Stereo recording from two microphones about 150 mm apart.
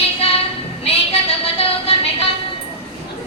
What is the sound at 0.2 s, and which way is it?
Child singing, 40° left (ahead or behind).